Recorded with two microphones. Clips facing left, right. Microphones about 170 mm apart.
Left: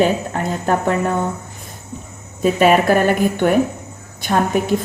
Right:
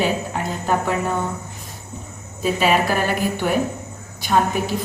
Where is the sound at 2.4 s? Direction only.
50° left (ahead or behind).